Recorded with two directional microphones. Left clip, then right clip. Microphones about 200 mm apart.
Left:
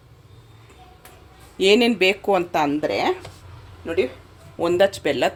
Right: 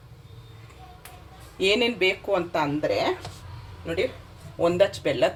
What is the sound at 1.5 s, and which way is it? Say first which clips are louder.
Speech: left 6 dB; 55° left (ahead or behind).